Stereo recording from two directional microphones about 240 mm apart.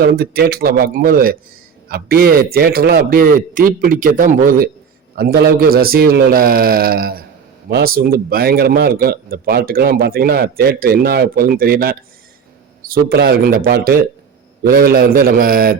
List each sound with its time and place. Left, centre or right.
0.0 s a man's voice: right